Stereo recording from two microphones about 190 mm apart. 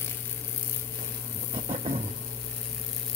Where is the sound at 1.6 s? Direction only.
35° right (ahead or behind).